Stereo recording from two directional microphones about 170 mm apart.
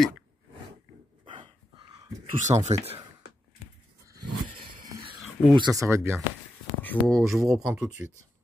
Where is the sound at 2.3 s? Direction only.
45° right (ahead or behind).